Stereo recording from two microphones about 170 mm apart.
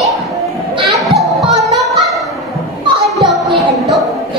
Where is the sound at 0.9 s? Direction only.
Centre (ahead or behind).